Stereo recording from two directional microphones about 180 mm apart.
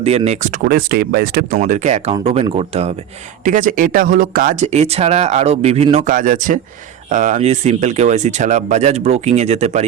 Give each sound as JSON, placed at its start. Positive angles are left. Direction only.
{"t": 0.3, "sound": "speech", "side_deg": -45}
{"t": 1.5, "sound": "speech", "side_deg": -45}
{"t": 3.4, "sound": "speech", "side_deg": -45}